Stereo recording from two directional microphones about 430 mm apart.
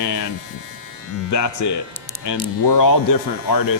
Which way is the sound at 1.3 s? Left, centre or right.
Left.